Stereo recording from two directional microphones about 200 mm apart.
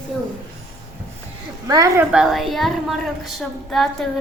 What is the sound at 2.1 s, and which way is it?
Speech, centre (ahead or behind).